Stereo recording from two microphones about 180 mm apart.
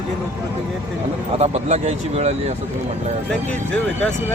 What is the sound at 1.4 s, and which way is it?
Speech, 40° right (ahead or behind).